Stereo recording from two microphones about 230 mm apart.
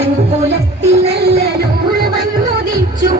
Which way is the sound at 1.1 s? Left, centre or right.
Right.